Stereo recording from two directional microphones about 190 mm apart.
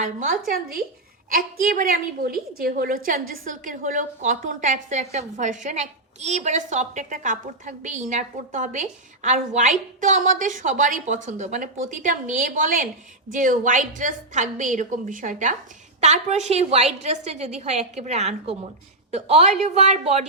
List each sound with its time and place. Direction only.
0.0 s a woman's voice: 40° right (ahead or behind)